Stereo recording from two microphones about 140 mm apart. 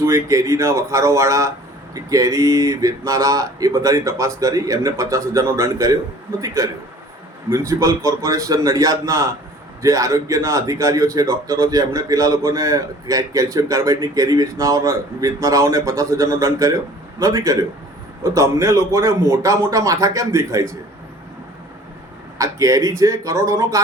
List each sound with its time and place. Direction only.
0.0 s a man's voice: 20° right (ahead or behind)
22.4 s a man's voice: 25° right (ahead or behind)